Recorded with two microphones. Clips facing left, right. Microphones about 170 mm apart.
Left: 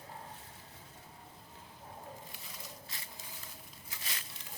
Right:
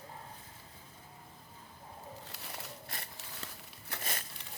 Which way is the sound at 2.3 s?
70° right (ahead or behind).